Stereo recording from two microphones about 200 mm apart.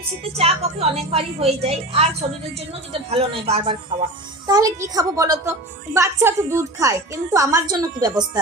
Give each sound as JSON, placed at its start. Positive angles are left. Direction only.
{"t": 0.3, "sound": "a woman's voice", "side_deg": -30}
{"t": 3.1, "sound": "speech", "side_deg": -30}
{"t": 4.4, "sound": "a woman's voice", "side_deg": -20}